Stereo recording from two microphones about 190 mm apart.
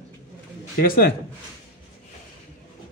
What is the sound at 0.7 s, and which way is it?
Speech, 50° left (ahead or behind).